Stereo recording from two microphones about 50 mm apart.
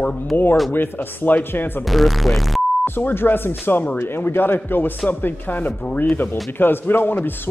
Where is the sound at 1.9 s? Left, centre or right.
Centre.